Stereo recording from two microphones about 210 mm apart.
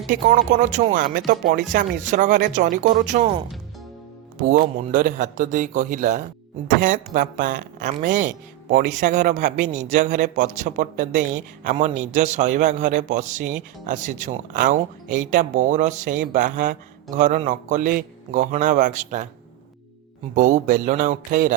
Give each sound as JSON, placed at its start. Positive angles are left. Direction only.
{"t": 0.1, "sound": "speech", "side_deg": -35}
{"t": 20.3, "sound": "speech", "side_deg": -40}